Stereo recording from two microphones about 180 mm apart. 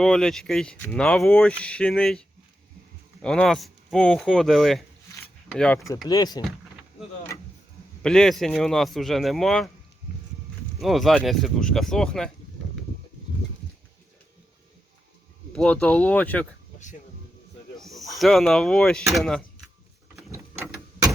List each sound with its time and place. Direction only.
0.0 s speech: 5° left (ahead or behind)
6.1 s speech: 20° left (ahead or behind)
8.0 s speech: 5° left (ahead or behind)
10.8 s speech: centre (ahead or behind)
15.5 s speech: 5° left (ahead or behind)
17.7 s snake: centre (ahead or behind)
18.2 s speech: centre (ahead or behind)
20.3 s a sound: 15° right (ahead or behind)